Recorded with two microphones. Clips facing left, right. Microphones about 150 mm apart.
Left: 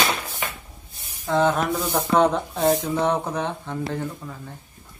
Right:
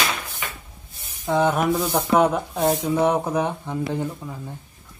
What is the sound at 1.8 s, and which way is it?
Speech, 15° right (ahead or behind).